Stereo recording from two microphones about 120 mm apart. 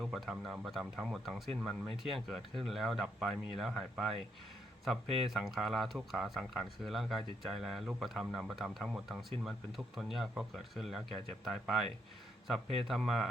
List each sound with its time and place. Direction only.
0.0 s speech: centre (ahead or behind)